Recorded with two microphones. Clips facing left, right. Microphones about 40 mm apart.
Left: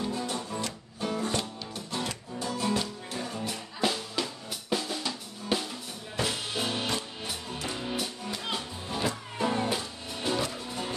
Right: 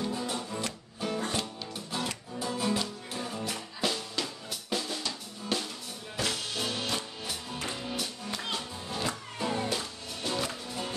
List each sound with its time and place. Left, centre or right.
0.1 s music: centre